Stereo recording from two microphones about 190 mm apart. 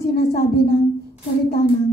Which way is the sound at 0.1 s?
55° left (ahead or behind).